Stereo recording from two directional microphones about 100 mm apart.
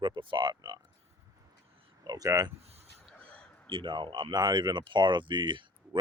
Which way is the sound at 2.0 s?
40° right (ahead or behind).